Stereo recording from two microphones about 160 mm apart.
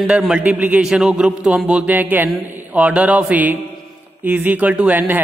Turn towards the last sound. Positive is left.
turn(degrees=-10)  # may be behind; listen again after turning